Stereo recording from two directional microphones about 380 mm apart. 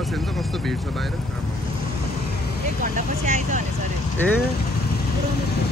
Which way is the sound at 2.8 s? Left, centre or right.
Centre.